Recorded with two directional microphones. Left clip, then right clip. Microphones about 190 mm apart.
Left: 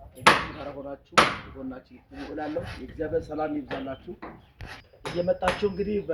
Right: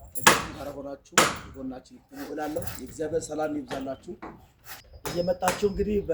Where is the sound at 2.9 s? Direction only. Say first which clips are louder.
Even; 15° right (ahead or behind).